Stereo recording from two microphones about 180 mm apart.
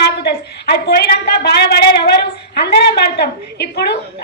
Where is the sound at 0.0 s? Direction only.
60° left (ahead or behind).